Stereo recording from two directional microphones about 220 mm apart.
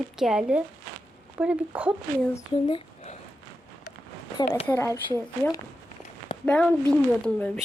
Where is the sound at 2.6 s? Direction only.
20° left (ahead or behind).